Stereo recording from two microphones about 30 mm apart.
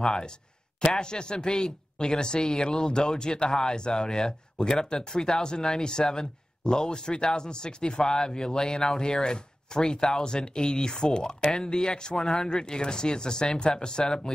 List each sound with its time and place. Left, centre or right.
0.0 s speech: left